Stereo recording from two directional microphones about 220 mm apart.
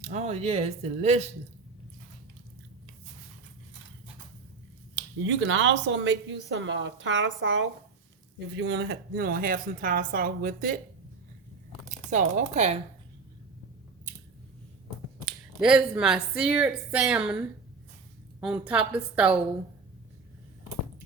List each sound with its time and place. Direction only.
0.0 s speech: 30° right (ahead or behind)
5.2 s a woman's voice: 60° right (ahead or behind); by 10.8 s 40° right (ahead or behind)
12.1 s a woman's voice: 30° right (ahead or behind)
15.2 s speech: centre (ahead or behind)
18.3 s a woman's voice: 5° right (ahead or behind)